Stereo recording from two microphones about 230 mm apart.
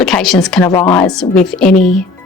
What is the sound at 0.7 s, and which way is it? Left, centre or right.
Speech, centre.